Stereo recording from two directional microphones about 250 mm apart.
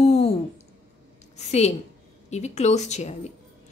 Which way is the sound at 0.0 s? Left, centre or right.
Left.